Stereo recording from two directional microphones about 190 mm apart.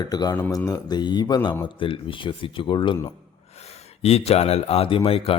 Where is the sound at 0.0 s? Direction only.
20° left (ahead or behind).